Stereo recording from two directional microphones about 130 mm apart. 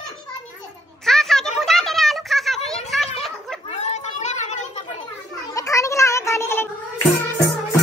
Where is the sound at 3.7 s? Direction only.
60° left (ahead or behind).